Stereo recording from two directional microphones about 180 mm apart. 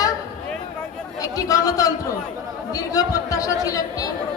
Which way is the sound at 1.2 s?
20° left (ahead or behind).